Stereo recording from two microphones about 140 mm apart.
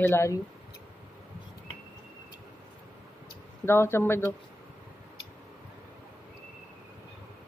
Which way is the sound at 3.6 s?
20° left (ahead or behind).